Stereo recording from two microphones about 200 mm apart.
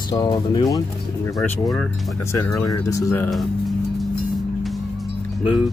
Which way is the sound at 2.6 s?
15° left (ahead or behind).